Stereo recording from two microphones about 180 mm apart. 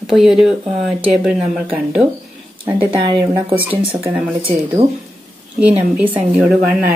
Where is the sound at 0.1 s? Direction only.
Centre (ahead or behind).